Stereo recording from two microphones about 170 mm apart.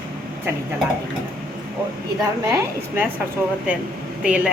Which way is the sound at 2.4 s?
20° right (ahead or behind).